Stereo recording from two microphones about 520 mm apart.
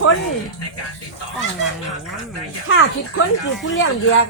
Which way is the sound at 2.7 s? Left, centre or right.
Left.